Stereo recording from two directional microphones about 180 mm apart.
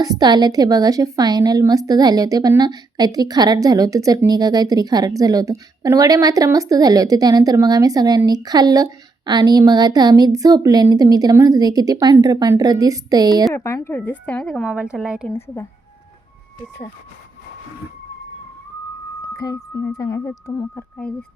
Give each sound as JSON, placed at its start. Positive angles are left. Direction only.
{"t": 0.0, "sound": "a woman's voice", "side_deg": -20}
{"t": 13.5, "sound": "a woman's voice", "side_deg": 15}
{"t": 15.3, "sound": "a woman's voice", "side_deg": 15}
{"t": 19.4, "sound": "speech", "side_deg": 20}